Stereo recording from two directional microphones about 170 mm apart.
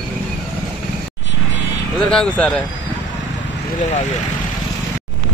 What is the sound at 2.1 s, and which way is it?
Speech, 5° left (ahead or behind).